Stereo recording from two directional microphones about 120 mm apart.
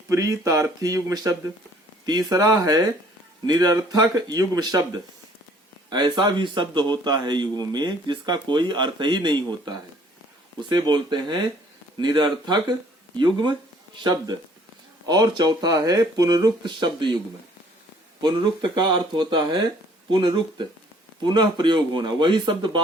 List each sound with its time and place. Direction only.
0.1 s a man's voice: 25° right (ahead or behind)
18.2 s a man's voice: 40° right (ahead or behind)